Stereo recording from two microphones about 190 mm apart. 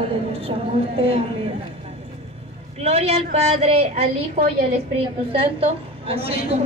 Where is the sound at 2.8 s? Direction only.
35° right (ahead or behind).